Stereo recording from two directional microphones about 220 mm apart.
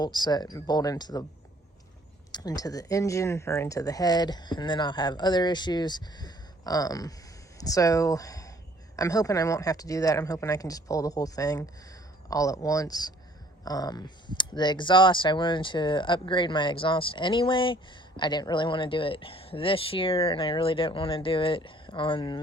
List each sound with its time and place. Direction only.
0.0 s speech: 20° left (ahead or behind)
2.3 s speech: 15° left (ahead or behind)